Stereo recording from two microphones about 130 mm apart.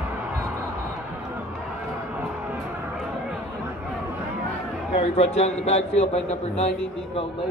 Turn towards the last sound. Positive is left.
turn(degrees=55)  # may be behind; listen again after turning